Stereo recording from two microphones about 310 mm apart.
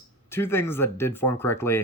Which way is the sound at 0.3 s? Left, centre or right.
Centre.